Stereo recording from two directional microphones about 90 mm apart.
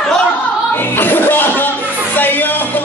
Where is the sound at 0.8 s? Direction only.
25° left (ahead or behind).